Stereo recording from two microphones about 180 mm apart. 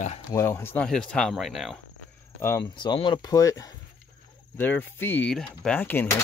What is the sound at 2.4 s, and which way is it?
Speech, 20° left (ahead or behind).